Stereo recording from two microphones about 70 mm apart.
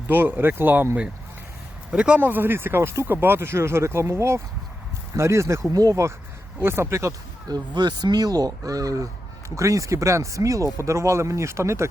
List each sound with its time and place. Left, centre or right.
0.1 s speech: right
1.9 s speech: centre; by 5.7 s right
5.7 s speech: right
6.6 s speech: right
7.4 s speech: right